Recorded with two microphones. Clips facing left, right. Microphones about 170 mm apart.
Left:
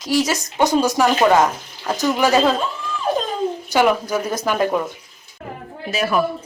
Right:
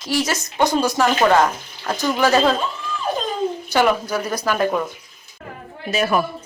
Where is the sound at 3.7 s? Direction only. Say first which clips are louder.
Left 1 dB; 15° left (ahead or behind).